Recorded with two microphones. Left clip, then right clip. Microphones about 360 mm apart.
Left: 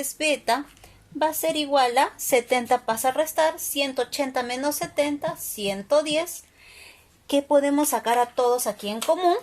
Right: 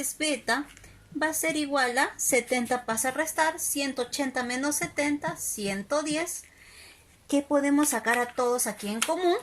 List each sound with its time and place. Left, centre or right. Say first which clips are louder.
0.0 s a woman's voice: left 5 dB; left
7.3 s a woman's voice: left 5 dB; left